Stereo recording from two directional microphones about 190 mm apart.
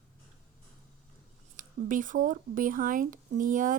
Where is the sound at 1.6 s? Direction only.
45° right (ahead or behind).